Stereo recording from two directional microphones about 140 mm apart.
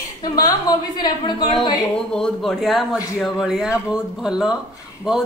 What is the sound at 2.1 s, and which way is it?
A woman's voice, 5° left (ahead or behind).